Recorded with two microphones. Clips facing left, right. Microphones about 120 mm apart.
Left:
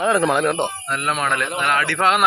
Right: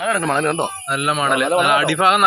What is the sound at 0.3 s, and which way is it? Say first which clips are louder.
Speech: even; 5° left (ahead or behind).